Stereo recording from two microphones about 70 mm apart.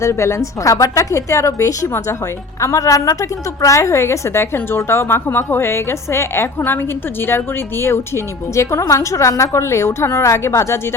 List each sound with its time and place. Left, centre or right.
0.0 s a woman's voice: left